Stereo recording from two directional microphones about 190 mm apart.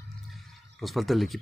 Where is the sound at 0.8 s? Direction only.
Centre (ahead or behind).